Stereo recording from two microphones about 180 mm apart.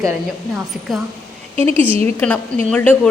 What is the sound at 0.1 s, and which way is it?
Speech, centre (ahead or behind).